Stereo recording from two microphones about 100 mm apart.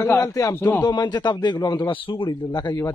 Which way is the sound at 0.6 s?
15° left (ahead or behind).